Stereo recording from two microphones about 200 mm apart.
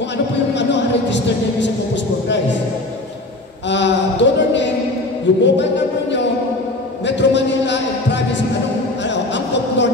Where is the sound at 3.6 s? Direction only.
60° left (ahead or behind).